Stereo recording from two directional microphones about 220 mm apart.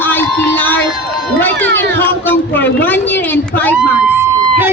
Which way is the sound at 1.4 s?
10° left (ahead or behind).